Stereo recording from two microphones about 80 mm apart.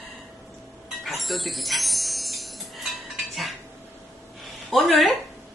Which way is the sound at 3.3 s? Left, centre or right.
Centre.